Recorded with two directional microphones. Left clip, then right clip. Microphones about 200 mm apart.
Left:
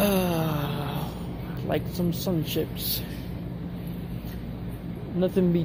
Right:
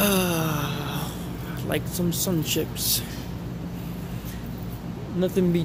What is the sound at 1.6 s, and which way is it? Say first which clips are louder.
Speech: even; 10° right (ahead or behind).